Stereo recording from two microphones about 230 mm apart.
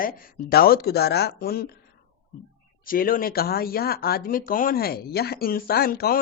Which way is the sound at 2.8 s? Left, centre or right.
Left.